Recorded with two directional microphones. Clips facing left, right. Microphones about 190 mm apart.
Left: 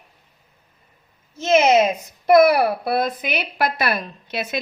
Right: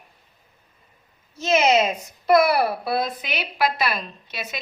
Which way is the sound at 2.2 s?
50° left (ahead or behind).